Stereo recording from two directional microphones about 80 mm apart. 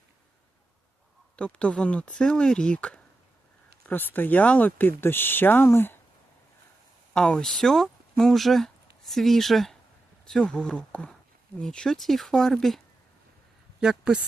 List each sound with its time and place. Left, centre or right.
1.4 s speech: centre; by 6.0 s left
7.1 s speech: centre
13.8 s speech: centre